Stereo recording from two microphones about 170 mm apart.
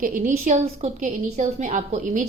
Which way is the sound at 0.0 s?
50° right (ahead or behind).